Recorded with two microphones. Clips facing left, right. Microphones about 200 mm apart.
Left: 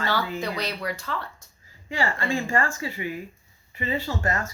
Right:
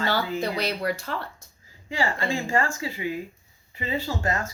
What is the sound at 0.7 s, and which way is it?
Speech, 50° right (ahead or behind).